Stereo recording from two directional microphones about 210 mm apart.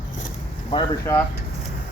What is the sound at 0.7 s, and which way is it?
Speech, 15° left (ahead or behind).